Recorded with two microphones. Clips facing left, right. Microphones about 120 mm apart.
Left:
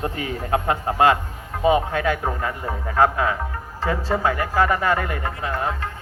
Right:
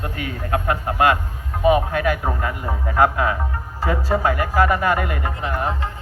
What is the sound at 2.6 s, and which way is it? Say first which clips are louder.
Speech: right 1 dB; 15° right (ahead or behind).